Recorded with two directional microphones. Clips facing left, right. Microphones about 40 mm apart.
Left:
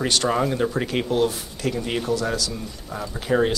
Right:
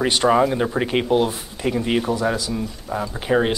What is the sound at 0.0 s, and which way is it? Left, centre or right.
Speech, centre.